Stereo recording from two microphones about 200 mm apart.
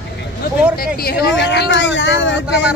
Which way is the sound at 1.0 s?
50° left (ahead or behind).